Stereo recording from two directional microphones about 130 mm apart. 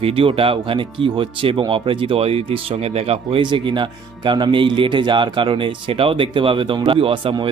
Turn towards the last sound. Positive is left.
turn(degrees=-45)  # may be behind; listen again after turning